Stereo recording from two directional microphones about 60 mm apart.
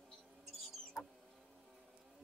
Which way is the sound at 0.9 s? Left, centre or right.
Centre.